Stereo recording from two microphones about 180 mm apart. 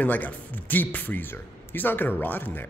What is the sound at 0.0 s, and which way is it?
Speech, 10° left (ahead or behind).